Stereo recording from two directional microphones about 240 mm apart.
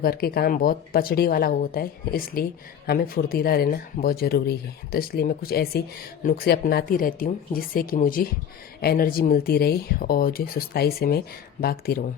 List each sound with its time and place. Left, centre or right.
0.0 s speech: left